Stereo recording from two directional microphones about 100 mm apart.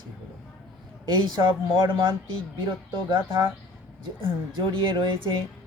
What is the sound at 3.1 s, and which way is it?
Speech, 55° right (ahead or behind).